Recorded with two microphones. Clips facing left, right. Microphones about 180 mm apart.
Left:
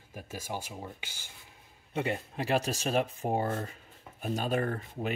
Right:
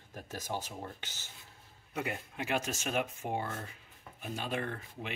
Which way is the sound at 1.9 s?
30° left (ahead or behind).